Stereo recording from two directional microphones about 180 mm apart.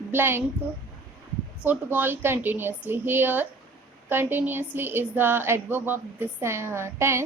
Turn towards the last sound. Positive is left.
turn(degrees=-15)  # may be behind; listen again after turning